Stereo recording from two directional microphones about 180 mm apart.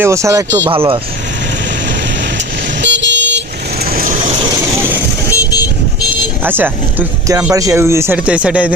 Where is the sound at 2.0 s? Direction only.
75° right (ahead or behind).